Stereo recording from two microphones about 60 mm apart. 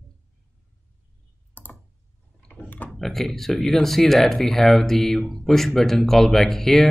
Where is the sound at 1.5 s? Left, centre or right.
Left.